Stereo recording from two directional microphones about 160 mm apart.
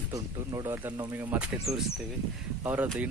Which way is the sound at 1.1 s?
10° right (ahead or behind).